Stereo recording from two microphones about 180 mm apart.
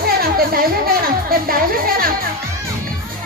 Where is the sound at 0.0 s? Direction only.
55° right (ahead or behind).